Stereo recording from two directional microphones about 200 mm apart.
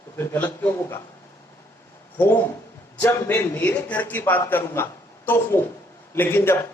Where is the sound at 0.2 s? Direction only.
10° left (ahead or behind).